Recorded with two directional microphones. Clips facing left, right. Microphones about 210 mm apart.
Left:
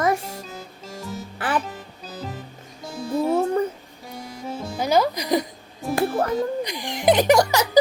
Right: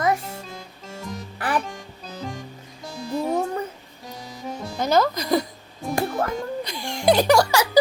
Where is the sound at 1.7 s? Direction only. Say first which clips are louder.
Even; 5° left (ahead or behind).